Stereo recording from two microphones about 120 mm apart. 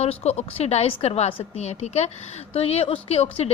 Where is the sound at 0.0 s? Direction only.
60° left (ahead or behind).